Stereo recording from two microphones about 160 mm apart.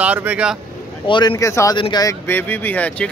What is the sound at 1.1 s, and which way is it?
Speech, 25° left (ahead or behind).